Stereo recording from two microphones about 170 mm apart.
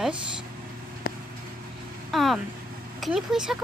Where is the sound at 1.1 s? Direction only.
65° left (ahead or behind).